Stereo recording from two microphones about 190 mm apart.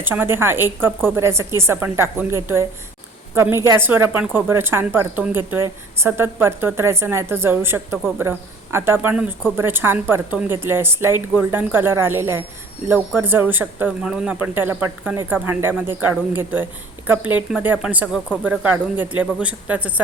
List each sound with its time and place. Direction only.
0.0 s speech: 10° right (ahead or behind)